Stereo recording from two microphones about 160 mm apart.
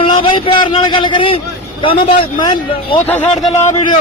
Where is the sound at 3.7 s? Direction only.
35° left (ahead or behind).